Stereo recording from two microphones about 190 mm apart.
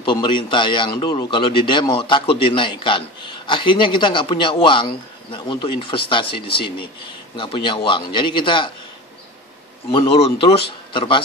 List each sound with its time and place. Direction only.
0.0 s speech: 25° left (ahead or behind)
9.8 s speech: 30° left (ahead or behind)